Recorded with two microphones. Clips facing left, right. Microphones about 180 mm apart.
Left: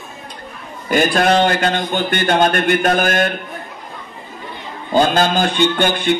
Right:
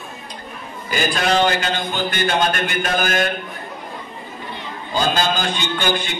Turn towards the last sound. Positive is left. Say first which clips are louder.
# left 6 dB
turn(degrees=55)  # may be behind; listen again after turning